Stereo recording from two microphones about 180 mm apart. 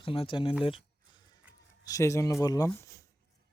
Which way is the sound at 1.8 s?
15° left (ahead or behind).